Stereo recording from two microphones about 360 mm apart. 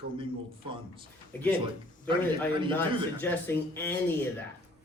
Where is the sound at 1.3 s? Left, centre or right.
Centre.